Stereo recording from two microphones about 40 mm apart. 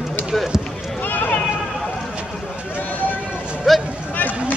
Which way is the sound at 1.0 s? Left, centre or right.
Left.